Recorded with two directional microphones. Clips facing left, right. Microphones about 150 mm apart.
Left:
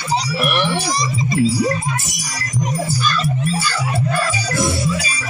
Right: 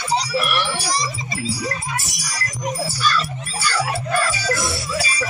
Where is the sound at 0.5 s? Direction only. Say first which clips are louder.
Left 4 dB; 20° left (ahead or behind).